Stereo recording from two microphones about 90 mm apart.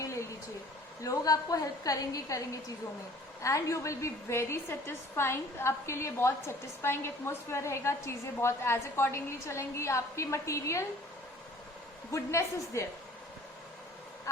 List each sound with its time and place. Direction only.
0.0 s a sound: 35° left (ahead or behind)
1.0 s a woman's voice: 40° left (ahead or behind)
12.1 s a woman's voice: 35° left (ahead or behind)